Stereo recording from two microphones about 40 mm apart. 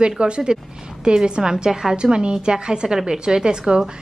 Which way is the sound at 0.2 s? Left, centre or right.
Right.